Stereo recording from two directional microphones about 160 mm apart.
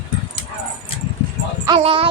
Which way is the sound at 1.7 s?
35° right (ahead or behind).